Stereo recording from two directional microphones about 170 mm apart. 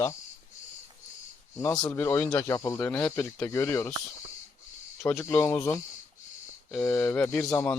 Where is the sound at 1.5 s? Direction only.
15° left (ahead or behind).